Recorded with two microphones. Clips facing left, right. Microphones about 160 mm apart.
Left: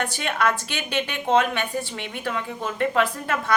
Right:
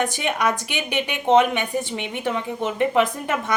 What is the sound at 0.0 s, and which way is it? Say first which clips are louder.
A woman's voice: right 2 dB; 15° right (ahead or behind).